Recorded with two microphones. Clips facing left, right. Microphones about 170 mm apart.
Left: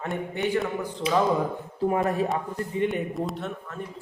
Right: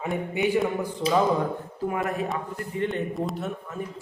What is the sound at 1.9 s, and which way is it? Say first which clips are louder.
Speech: left 3 dB; 30° left (ahead or behind).